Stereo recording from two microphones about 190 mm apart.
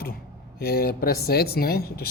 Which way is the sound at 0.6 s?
55° left (ahead or behind).